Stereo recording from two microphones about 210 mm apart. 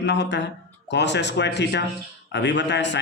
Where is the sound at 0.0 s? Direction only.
55° left (ahead or behind).